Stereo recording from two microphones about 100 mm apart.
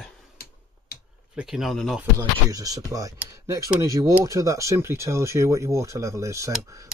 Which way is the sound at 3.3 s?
35° right (ahead or behind).